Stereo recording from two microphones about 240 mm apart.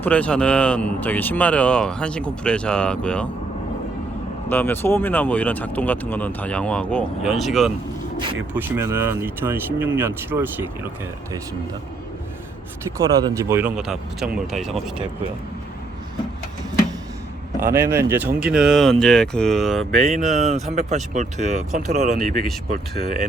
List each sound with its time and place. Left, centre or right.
0.0 s speech: centre
4.4 s speech: centre
13.2 s speech: centre
17.6 s speech: centre
20.1 s speech: right